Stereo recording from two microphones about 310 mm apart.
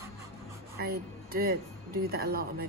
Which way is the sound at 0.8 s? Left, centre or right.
Right.